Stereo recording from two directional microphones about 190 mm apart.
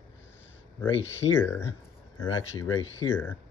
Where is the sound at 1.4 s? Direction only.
15° left (ahead or behind).